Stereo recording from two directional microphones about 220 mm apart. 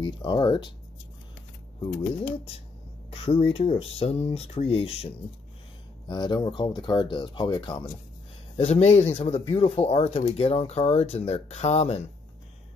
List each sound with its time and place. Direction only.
0.0 s speech: 20° left (ahead or behind)
2.2 s speech: 25° left (ahead or behind)